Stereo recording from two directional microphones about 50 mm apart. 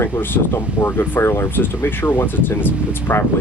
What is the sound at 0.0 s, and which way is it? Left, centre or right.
Speech, left.